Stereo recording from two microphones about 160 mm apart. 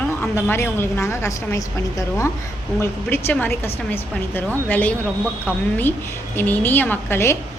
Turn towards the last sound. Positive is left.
turn(degrees=15)  # may be behind; listen again after turning